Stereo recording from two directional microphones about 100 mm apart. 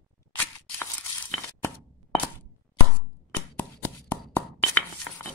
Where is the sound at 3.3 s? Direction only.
15° left (ahead or behind).